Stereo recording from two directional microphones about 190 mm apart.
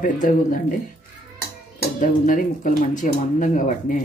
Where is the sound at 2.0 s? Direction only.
45° left (ahead or behind).